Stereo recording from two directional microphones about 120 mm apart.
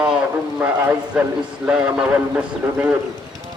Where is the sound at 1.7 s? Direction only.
10° right (ahead or behind).